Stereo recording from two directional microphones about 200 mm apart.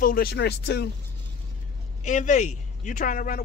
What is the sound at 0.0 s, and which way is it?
Speech, 50° left (ahead or behind).